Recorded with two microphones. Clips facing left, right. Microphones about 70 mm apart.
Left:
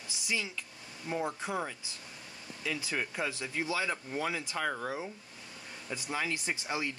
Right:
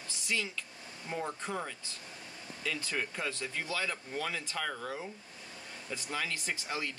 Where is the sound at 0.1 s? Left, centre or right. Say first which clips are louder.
Even; centre.